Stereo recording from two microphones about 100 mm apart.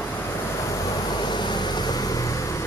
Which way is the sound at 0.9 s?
45° left (ahead or behind).